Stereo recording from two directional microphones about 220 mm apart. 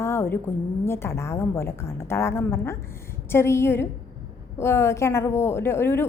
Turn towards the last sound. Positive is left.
turn(degrees=10)  # may be behind; listen again after turning